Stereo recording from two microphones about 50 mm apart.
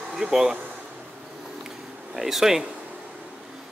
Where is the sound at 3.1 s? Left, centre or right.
Centre.